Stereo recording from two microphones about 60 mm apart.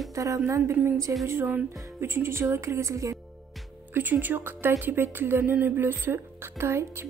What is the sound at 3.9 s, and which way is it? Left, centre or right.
Speech, right.